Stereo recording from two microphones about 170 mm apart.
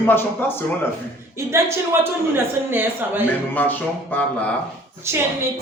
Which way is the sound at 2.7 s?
10° right (ahead or behind).